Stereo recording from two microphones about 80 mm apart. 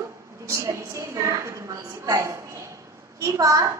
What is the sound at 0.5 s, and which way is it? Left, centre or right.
A woman's voice, right.